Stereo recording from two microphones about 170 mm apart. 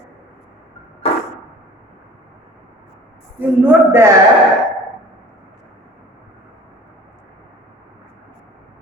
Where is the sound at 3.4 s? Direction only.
10° right (ahead or behind).